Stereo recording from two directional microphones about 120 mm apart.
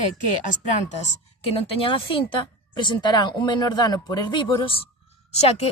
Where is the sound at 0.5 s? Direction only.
80° left.